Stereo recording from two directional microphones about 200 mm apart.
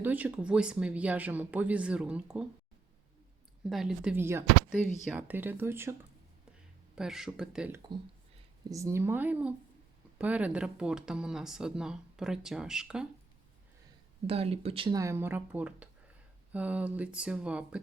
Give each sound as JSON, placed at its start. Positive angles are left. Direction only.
{"t": 0.0, "sound": "speech", "side_deg": -10}
{"t": 3.7, "sound": "speech", "side_deg": 0}
{"t": 14.3, "sound": "speech", "side_deg": -30}